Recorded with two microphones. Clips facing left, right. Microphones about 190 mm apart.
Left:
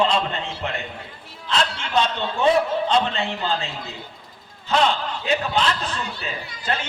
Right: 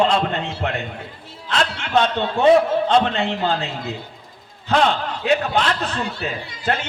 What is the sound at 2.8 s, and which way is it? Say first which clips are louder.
Speech: right 4 dB; 60° right (ahead or behind).